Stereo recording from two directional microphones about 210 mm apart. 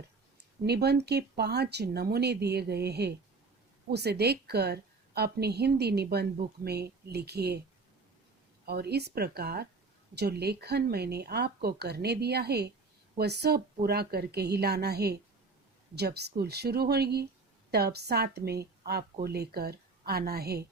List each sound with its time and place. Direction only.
0.6 s speech: 50° right (ahead or behind)
8.6 s speech: 50° right (ahead or behind)
18.8 s a sound: 50° right (ahead or behind)
19.2 s speech: 50° right (ahead or behind)